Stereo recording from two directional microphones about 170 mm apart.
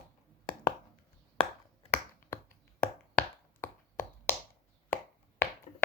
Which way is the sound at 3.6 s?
15° left (ahead or behind).